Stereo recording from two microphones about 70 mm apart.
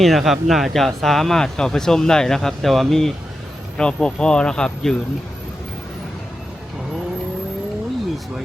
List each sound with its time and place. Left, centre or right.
0.0 s speech: centre